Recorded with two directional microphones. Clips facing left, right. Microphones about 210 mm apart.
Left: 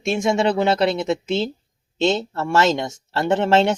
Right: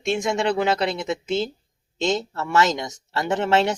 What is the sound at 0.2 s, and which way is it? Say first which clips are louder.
Speech: left 3 dB; 25° left (ahead or behind).